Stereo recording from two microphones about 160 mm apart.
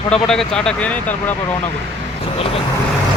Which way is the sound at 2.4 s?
35° left (ahead or behind).